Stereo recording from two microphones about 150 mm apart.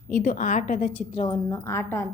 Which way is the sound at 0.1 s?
70° left (ahead or behind).